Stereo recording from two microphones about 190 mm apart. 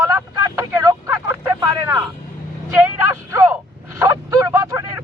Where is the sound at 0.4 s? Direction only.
20° right (ahead or behind).